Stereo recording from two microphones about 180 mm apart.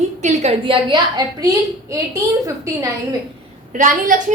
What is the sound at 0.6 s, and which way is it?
A woman's voice, 25° right (ahead or behind).